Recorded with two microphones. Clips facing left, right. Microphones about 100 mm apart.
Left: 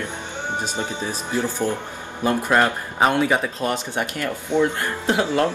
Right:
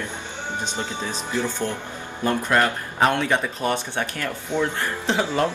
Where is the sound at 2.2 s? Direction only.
20° left (ahead or behind).